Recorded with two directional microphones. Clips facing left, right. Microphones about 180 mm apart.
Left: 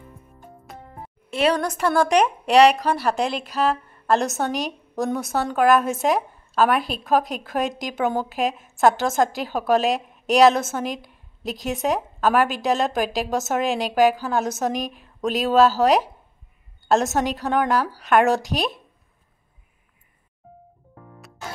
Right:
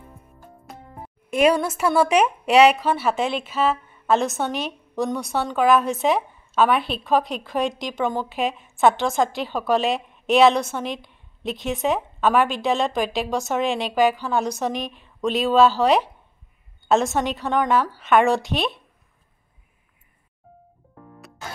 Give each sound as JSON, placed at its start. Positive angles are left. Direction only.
{"t": 0.7, "sound": "music", "side_deg": 0}
{"t": 1.3, "sound": "a woman's voice", "side_deg": -10}
{"t": 4.6, "sound": "a sound", "side_deg": 40}
{"t": 5.0, "sound": "a woman's voice", "side_deg": 0}
{"t": 14.7, "sound": "a woman's voice", "side_deg": 40}
{"t": 15.2, "sound": "a woman's voice", "side_deg": 0}
{"t": 16.8, "sound": "a woman's voice", "side_deg": 0}